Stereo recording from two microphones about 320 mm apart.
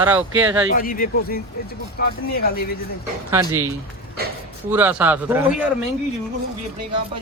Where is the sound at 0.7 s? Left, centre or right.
Left.